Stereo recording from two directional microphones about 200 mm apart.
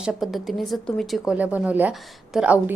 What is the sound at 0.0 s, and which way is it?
A woman's voice, centre (ahead or behind).